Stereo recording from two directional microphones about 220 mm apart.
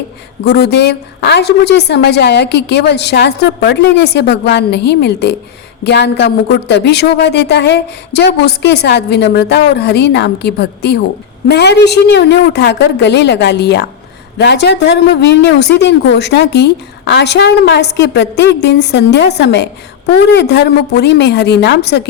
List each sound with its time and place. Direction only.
0.4 s a woman's voice: 50° left (ahead or behind)